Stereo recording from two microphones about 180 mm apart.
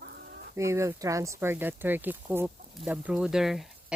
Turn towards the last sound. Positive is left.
turn(degrees=0)  # may be behind; listen again after turning